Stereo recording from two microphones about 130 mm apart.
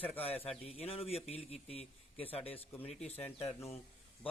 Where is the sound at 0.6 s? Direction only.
50° left (ahead or behind).